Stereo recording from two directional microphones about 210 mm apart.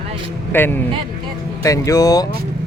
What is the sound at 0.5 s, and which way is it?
Speech, 10° left (ahead or behind).